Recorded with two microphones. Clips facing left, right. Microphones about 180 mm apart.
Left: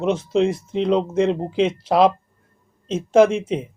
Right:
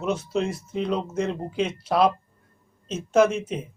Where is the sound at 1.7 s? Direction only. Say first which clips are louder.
Left 5 dB; 25° left (ahead or behind).